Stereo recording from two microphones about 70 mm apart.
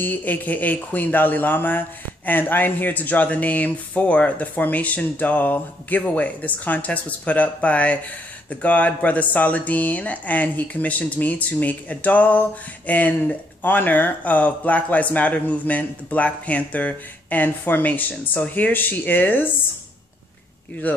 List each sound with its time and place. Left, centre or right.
0.0 s speech: left